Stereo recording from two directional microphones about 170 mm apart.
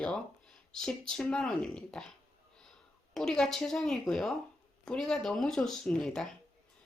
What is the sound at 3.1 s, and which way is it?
Speech, 5° left (ahead or behind).